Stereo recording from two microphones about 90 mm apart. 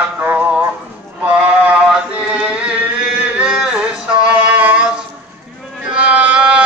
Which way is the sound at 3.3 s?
10° right (ahead or behind).